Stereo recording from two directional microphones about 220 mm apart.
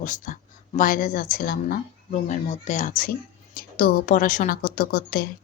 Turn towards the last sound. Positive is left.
turn(degrees=40)  # may be behind; listen again after turning